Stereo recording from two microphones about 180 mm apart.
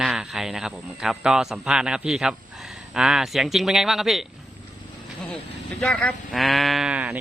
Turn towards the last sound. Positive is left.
turn(degrees=-5)  # may be behind; listen again after turning